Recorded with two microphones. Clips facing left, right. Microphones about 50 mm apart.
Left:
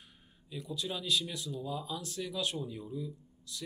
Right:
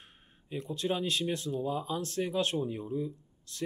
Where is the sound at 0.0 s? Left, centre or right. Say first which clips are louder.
Right 2 dB; right.